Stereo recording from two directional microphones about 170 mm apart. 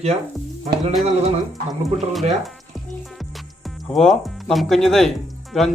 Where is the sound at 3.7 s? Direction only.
Centre (ahead or behind).